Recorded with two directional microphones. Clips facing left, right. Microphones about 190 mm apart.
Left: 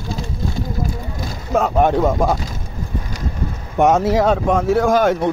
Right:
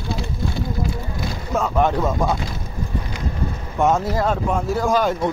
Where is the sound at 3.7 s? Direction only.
75° left (ahead or behind).